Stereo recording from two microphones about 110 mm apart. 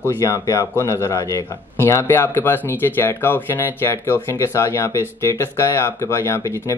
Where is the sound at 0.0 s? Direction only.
20° left (ahead or behind).